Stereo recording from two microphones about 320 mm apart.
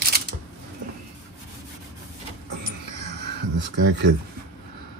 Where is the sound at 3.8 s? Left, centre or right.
Right.